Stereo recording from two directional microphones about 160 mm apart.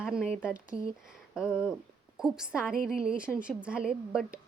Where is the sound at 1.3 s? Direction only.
5° right (ahead or behind).